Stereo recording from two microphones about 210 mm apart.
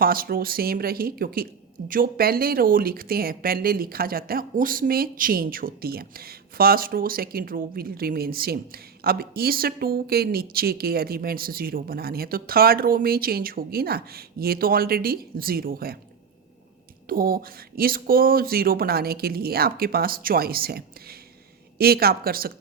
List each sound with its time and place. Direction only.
0.0 s a woman's voice: 45° right (ahead or behind)
17.1 s a woman's voice: 45° right (ahead or behind)